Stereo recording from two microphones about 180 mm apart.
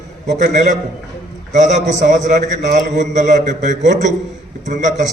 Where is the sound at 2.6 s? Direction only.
70° right (ahead or behind).